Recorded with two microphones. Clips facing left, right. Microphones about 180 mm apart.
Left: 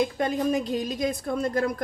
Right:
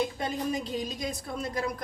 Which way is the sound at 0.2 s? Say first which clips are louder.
Left 6 dB; 55° left (ahead or behind).